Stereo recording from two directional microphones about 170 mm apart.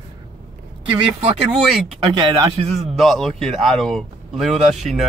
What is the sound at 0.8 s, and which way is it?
Speech, 35° right (ahead or behind).